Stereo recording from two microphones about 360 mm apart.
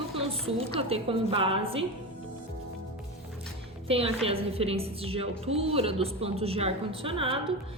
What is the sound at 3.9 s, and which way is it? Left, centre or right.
A woman's voice, centre.